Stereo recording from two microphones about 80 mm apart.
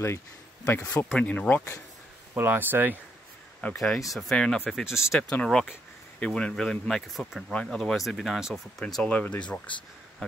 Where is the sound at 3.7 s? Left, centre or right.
Centre.